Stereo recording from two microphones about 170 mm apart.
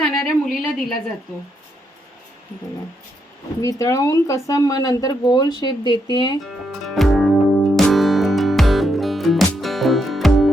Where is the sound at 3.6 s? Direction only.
20° left (ahead or behind).